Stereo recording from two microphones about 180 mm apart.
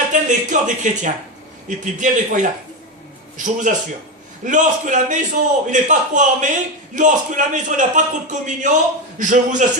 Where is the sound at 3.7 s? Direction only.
45° right (ahead or behind).